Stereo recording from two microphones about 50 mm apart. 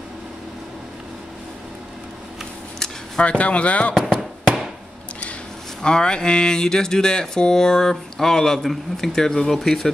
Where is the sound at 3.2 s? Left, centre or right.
Left.